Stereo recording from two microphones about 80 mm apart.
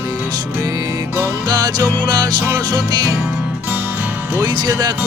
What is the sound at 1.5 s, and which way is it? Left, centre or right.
Music, right.